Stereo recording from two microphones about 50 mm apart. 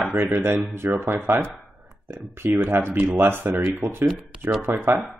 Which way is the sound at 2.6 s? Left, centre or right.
Right.